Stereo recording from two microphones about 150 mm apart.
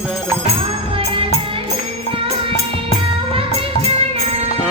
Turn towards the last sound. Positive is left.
turn(degrees=-40)  # may be behind; listen again after turning